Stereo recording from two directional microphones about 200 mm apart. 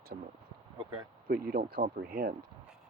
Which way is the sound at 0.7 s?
20° right (ahead or behind).